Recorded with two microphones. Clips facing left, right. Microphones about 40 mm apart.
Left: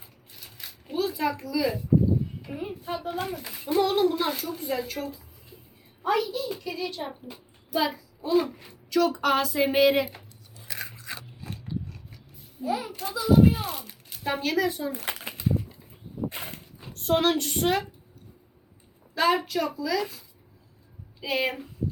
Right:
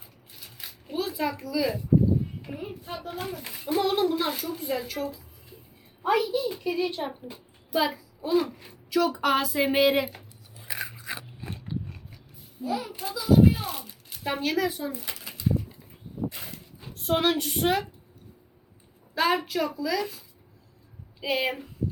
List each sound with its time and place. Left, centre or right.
0.3 s a sound: centre
2.5 s a sound: centre
3.5 s a child's voice: centre
7.1 s a child's voice: centre
10.6 s biting: centre
11.3 s biting: right
12.6 s a child's voice: centre
12.9 s speech: centre
14.9 s a sound: left
16.9 s speech: centre
19.1 s speech: centre